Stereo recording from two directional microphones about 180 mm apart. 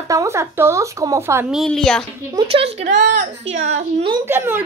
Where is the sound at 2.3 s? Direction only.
30° right (ahead or behind).